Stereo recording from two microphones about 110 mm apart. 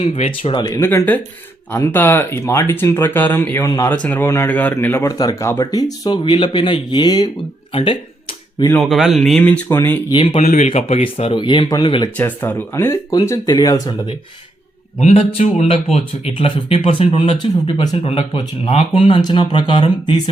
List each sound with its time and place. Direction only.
0.0 s speech: 70° left (ahead or behind)
0.8 s speech: 20° left (ahead or behind); by 7.3 s 40° left (ahead or behind)
7.7 s speech: 60° left (ahead or behind)
8.8 s speech: centre (ahead or behind)
9.6 s speech: 25° left (ahead or behind)
10.1 s speech: 55° left (ahead or behind)
10.3 s speech: 85° left; by 12.0 s 45° left (ahead or behind)
12.1 s speech: 15° left (ahead or behind); by 13.9 s 35° left (ahead or behind)
14.9 s speech: 75° left (ahead or behind); by 20.1 s 50° left (ahead or behind)